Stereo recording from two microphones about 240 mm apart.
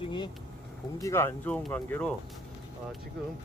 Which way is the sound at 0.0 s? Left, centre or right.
Centre.